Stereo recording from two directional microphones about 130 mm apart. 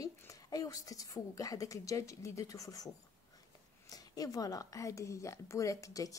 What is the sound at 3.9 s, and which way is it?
Speech, 30° left (ahead or behind).